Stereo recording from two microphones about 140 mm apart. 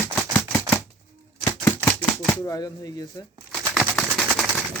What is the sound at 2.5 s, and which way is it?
Speech, 25° left (ahead or behind).